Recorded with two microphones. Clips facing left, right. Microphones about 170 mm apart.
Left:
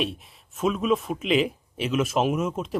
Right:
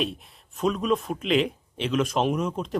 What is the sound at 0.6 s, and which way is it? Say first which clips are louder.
Speech: left 1 dB; 5° left (ahead or behind).